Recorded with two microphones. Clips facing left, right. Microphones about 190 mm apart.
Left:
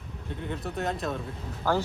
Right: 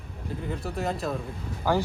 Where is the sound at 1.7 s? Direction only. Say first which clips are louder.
Right 1 dB; 15° right (ahead or behind).